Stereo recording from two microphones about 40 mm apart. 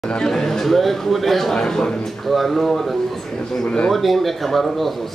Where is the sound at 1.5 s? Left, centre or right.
Centre.